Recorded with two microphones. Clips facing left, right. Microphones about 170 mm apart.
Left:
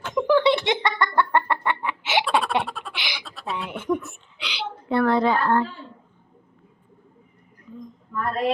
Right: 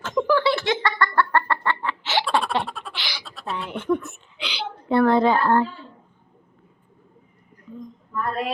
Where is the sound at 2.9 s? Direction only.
15° left (ahead or behind).